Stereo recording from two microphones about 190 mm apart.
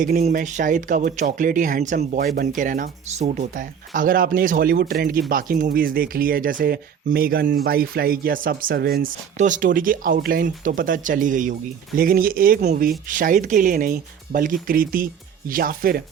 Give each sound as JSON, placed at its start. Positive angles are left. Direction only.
{"t": 0.2, "sound": "speech", "side_deg": -35}